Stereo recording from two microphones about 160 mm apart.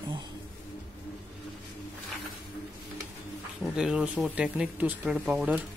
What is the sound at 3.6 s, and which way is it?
Speech, 5° right (ahead or behind).